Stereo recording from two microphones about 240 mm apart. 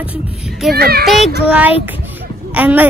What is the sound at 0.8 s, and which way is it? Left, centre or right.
Speech, right.